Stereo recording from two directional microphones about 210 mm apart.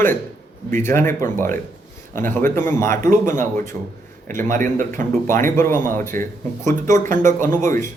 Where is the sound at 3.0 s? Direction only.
40° right (ahead or behind).